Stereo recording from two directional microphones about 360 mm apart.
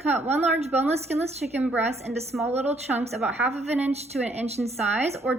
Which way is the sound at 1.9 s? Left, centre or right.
Centre.